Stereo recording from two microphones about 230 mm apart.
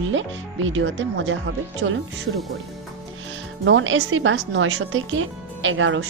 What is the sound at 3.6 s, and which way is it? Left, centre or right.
Speech, right.